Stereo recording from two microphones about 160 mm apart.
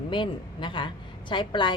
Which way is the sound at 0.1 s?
30° left (ahead or behind).